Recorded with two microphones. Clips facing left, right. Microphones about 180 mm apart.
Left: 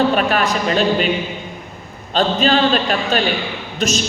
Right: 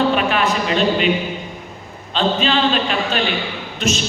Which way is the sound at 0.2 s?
45° left (ahead or behind).